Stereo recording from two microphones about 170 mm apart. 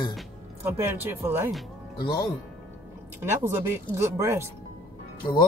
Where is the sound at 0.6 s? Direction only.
10° right (ahead or behind).